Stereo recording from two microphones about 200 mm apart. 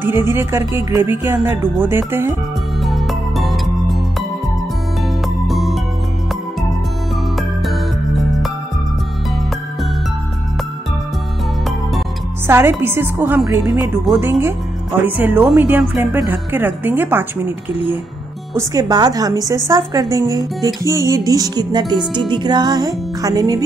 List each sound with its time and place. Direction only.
0.0 s a woman's voice: 10° right (ahead or behind)
2.8 s music: centre (ahead or behind)
5.5 s music: centre (ahead or behind)
7.3 s music: centre (ahead or behind)
12.4 s a woman's voice: 10° right (ahead or behind)
18.6 s a woman's voice: 20° right (ahead or behind)
22.3 s music: 20° right (ahead or behind)